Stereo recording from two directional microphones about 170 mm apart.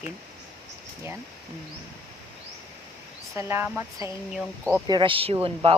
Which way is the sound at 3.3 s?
15° right (ahead or behind).